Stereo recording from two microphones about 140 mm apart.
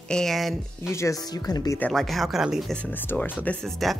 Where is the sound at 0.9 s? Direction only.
25° left (ahead or behind).